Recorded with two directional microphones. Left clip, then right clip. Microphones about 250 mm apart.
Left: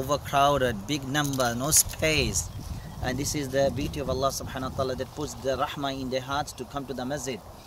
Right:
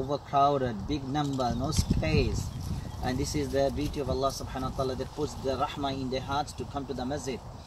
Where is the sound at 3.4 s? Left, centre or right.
Centre.